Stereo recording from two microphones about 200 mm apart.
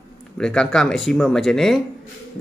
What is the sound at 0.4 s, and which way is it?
Speech, 5° left (ahead or behind).